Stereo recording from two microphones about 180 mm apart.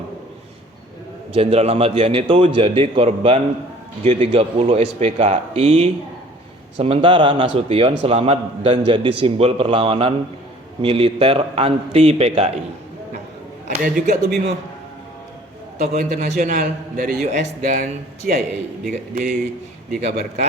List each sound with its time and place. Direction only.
1.3 s a man's voice: 35° right (ahead or behind)
13.7 s a man's voice: 50° right (ahead or behind)
15.9 s a man's voice: 40° right (ahead or behind)